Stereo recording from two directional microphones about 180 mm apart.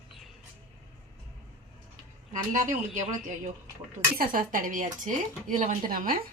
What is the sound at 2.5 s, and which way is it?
Speech, 45° right (ahead or behind).